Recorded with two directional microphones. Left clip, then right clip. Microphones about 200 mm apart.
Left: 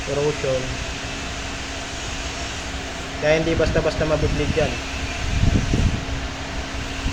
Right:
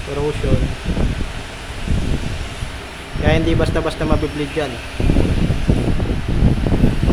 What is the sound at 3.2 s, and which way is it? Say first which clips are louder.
Speech: right 1 dB; 25° right (ahead or behind).